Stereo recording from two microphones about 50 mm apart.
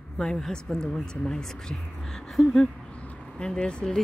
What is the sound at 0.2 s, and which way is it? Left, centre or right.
Speech, centre.